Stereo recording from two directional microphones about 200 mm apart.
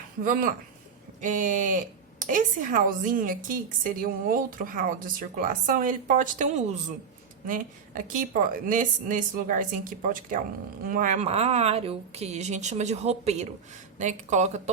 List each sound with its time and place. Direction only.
0.3 s speech: 40° right (ahead or behind)